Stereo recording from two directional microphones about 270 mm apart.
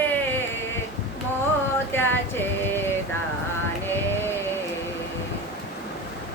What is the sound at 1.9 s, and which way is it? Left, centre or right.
Music, centre.